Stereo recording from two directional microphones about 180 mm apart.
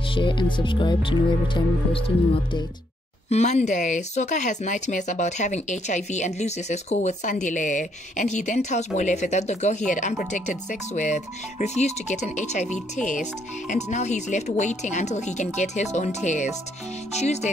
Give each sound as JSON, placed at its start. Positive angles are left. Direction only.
{"t": 0.1, "sound": "speech", "side_deg": 25}